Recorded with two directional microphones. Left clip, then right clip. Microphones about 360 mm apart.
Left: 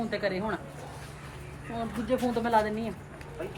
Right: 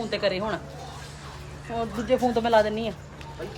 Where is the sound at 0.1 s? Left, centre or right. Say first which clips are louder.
Right 7 dB; right.